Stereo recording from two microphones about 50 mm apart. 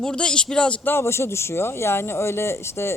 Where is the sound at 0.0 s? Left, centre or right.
Centre.